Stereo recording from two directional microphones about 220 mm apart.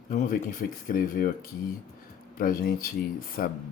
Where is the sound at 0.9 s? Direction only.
40° left (ahead or behind).